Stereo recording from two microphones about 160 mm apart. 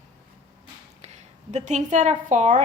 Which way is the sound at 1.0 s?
45° right (ahead or behind).